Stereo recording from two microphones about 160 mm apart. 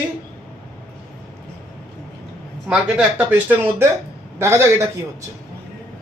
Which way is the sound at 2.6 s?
10° right (ahead or behind).